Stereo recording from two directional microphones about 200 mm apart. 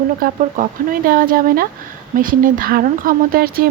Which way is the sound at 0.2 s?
45° right (ahead or behind).